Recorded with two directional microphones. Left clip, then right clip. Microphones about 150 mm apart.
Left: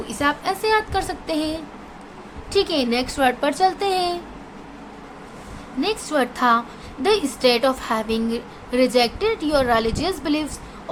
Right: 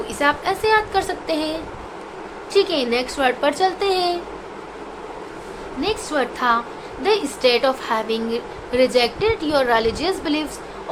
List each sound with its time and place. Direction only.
0.1 s a woman's voice: 25° left (ahead or behind)
5.8 s a woman's voice: 35° left (ahead or behind)